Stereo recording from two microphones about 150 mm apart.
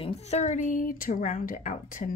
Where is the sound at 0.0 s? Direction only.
45° left (ahead or behind).